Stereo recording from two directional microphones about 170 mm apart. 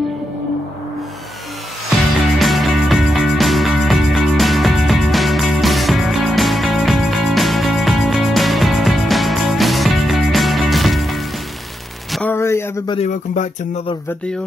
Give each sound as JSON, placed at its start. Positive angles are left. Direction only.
{"t": 2.3, "sound": "music", "side_deg": 0}
{"t": 12.1, "sound": "a sound", "side_deg": 10}
{"t": 13.0, "sound": "speech", "side_deg": 45}